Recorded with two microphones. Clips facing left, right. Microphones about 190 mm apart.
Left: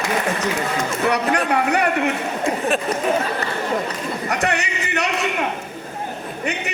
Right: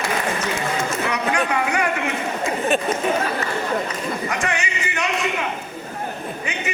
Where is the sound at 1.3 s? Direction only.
35° left (ahead or behind).